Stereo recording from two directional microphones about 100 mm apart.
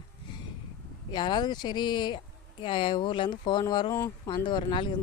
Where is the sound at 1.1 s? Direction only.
50° left (ahead or behind).